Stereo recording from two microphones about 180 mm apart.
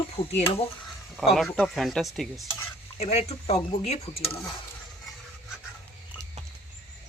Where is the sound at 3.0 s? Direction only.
35° left (ahead or behind).